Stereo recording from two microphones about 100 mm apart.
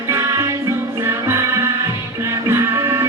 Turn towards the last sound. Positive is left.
turn(degrees=-25)  # may be behind; listen again after turning